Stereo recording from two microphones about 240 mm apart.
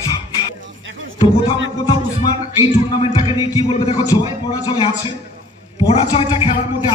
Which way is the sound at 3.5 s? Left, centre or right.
Centre.